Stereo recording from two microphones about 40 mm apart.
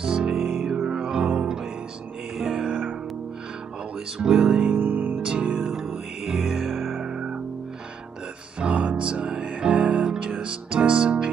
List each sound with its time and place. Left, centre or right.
0.0 s music: centre
0.4 s music: centre
0.8 s music: centre
2.3 s music: centre
4.2 s music: centre
4.7 s music: right
5.2 s music: right
5.6 s music: centre
7.1 s music: centre
8.5 s music: right